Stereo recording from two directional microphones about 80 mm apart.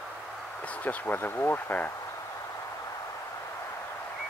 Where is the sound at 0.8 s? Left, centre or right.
Left.